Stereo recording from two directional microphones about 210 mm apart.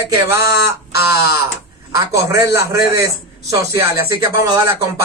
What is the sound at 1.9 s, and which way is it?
A man's voice, 15° right (ahead or behind).